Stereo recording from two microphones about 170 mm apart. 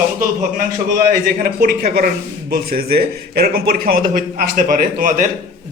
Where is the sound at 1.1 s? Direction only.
55° right (ahead or behind).